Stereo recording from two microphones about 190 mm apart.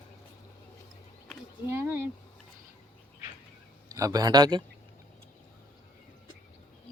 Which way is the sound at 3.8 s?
15° right (ahead or behind).